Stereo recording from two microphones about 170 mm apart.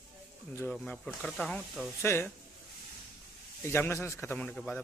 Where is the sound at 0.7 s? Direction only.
5° left (ahead or behind).